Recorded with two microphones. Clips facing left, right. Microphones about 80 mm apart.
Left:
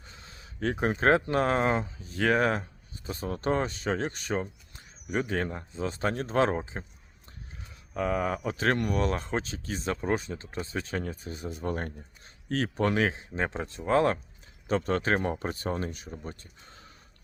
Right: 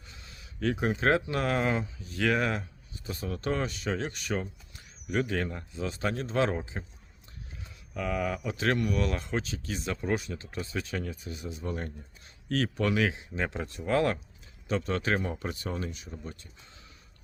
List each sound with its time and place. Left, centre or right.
0.0 s speech: left
7.9 s speech: left